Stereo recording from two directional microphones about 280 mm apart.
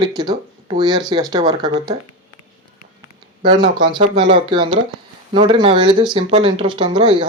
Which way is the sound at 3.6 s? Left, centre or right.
Centre.